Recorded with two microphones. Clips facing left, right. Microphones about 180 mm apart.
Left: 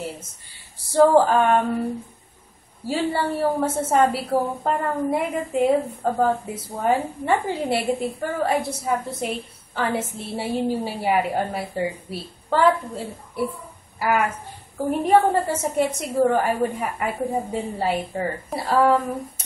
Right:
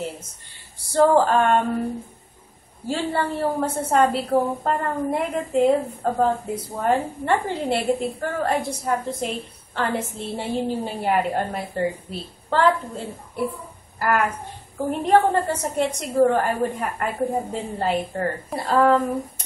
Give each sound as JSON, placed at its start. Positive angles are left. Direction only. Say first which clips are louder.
{"t": 0.9, "sound": "a woman's voice", "louder": "left 1 dB", "side_deg": 5}
{"t": 2.9, "sound": "a woman's voice", "louder": "left 1 dB", "side_deg": 5}